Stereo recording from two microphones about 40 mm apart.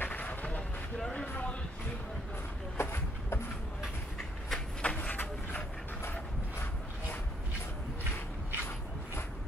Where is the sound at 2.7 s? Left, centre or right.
Left.